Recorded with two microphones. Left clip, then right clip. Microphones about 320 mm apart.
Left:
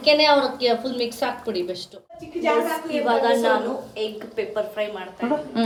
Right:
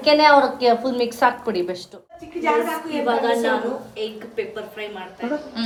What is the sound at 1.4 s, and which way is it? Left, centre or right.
A woman's voice, centre.